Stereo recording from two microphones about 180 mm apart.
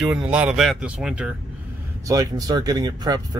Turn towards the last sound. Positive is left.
turn(degrees=-20)  # may be behind; listen again after turning